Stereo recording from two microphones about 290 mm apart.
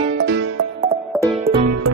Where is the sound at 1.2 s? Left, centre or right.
Centre.